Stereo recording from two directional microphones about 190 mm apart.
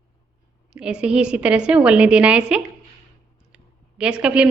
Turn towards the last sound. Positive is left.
turn(degrees=-5)  # may be behind; listen again after turning